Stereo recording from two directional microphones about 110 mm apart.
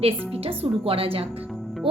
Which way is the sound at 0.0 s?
60° right (ahead or behind).